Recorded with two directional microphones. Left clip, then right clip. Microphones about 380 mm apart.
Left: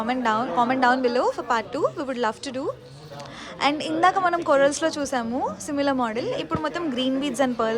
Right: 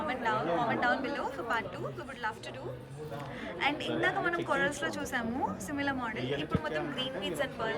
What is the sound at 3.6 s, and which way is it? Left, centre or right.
A woman's voice, centre.